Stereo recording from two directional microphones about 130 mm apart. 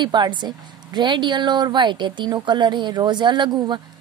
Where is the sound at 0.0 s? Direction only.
35° right (ahead or behind).